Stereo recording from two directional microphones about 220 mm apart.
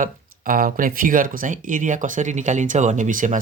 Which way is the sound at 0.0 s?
40° right (ahead or behind).